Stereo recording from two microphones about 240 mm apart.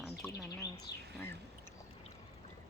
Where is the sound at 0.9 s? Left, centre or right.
Centre.